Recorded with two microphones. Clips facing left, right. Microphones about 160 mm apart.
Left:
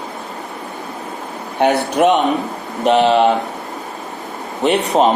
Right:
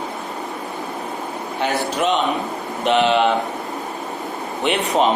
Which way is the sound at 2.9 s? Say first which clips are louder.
Left 4 dB; 35° left (ahead or behind).